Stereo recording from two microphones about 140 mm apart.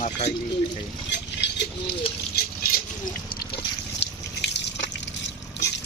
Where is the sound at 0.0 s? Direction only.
55° left (ahead or behind).